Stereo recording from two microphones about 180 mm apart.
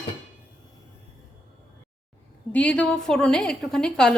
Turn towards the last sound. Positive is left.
turn(degrees=5)  # may be behind; listen again after turning